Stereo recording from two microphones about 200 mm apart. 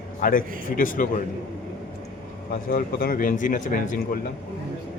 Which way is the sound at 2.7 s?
45° left (ahead or behind).